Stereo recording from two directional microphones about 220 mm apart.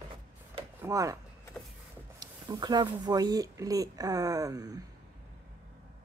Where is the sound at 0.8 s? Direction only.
15° right (ahead or behind).